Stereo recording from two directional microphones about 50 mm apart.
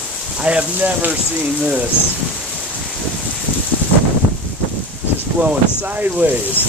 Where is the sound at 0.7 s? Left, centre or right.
Right.